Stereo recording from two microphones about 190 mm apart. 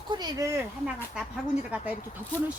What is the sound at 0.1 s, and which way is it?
Speech, 20° right (ahead or behind).